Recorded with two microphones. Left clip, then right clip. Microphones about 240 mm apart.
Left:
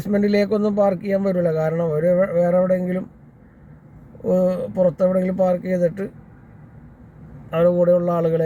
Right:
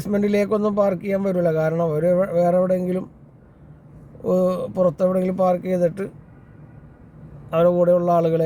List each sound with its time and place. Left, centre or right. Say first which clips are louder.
0.0 s a man's voice: left 1 dB; centre
4.2 s a man's voice: left 1 dB; centre
4.7 s a man's voice: left 2 dB; centre
7.5 s a man's voice: even; centre